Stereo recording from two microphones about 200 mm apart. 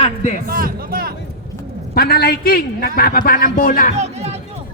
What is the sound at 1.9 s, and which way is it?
A man's voice, 50° left (ahead or behind).